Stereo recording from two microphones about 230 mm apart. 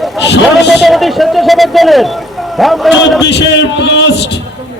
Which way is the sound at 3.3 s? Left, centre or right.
Left.